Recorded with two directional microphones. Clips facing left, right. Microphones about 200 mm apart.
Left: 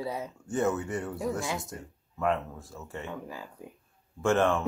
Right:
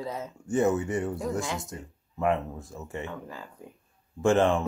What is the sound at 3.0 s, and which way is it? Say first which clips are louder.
Speech: even; 15° left (ahead or behind).